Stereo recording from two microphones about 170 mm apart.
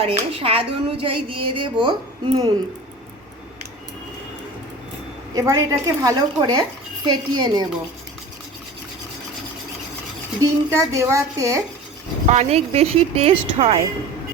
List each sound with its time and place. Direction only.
0.0 s speech: 35° right (ahead or behind)
5.3 s a woman's voice: 20° right (ahead or behind)
10.4 s speech: 20° right (ahead or behind)
12.3 s speech: 40° right (ahead or behind)